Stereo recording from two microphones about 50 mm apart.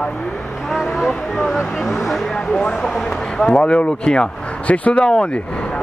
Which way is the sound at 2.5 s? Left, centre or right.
Centre.